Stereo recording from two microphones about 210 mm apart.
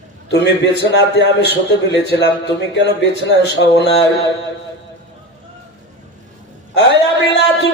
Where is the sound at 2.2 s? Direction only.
60° left (ahead or behind).